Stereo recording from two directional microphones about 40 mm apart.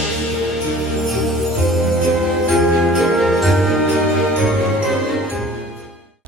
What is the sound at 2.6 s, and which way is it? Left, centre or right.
Jingle bell, centre.